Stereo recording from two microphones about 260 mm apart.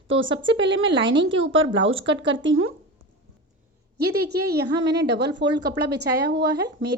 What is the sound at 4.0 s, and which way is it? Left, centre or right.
A woman's voice, right.